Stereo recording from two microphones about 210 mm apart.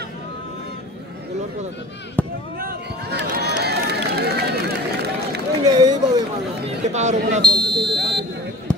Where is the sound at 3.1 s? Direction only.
50° right (ahead or behind).